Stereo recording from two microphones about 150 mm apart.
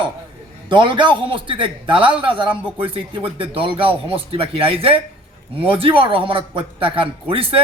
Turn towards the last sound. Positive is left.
turn(degrees=-35)  # may be behind; listen again after turning